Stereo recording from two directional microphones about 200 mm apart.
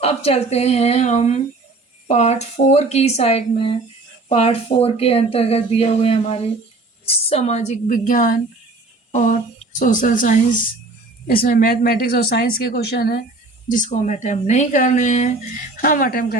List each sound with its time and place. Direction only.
0.0 s speech: 30° left (ahead or behind); by 13.2 s 50° left (ahead or behind)
13.7 s speech: 40° left (ahead or behind)